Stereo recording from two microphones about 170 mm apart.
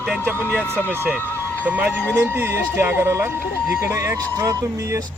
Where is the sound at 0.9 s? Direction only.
10° right (ahead or behind).